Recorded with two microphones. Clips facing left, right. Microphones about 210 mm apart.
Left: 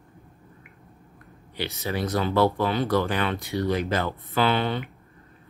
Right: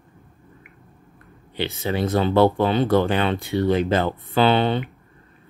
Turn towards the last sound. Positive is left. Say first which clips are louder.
# right 5 dB
turn(degrees=-25)  # may be behind; listen again after turning